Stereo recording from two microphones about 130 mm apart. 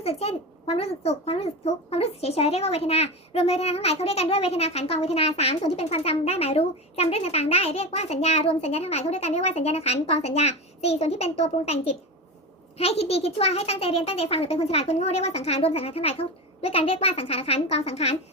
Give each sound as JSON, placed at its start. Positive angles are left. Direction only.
{"t": 0.0, "sound": "a child's voice", "side_deg": 50}